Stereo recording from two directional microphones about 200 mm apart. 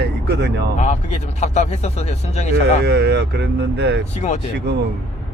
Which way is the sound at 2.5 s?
55° right (ahead or behind).